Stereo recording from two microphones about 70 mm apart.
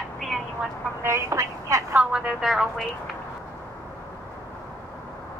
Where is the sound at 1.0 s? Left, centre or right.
Right.